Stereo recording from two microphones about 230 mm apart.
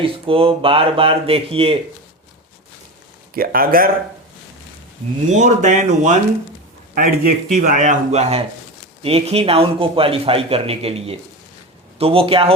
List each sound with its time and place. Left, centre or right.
0.0 s a man's voice: right
3.3 s speech: right
5.3 s a man's voice: right